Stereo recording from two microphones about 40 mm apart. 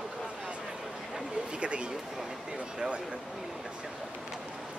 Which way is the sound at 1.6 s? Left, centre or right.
Right.